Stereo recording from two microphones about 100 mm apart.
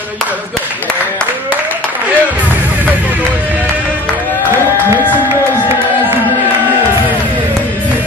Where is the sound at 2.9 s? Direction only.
15° right (ahead or behind).